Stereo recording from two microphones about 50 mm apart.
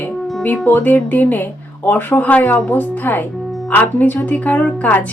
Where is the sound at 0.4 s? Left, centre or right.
Left.